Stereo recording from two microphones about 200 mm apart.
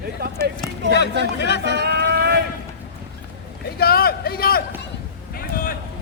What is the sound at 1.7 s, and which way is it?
Boat, 55° right (ahead or behind).